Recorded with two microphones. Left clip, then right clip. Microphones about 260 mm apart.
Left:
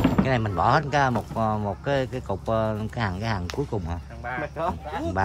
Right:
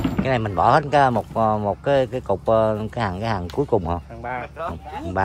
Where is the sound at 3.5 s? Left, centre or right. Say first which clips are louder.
Right 9 dB; left.